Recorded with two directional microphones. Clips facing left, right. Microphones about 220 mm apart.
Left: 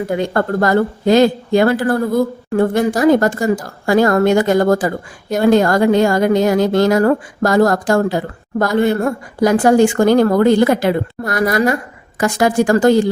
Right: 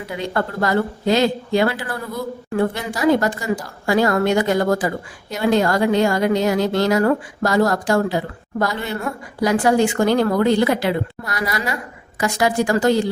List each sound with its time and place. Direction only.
0.0 s speech: 50° left (ahead or behind)